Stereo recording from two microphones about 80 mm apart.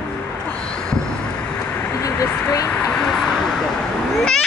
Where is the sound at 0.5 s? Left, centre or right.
Centre.